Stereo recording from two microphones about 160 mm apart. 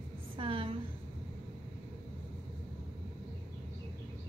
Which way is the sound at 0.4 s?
35° right (ahead or behind).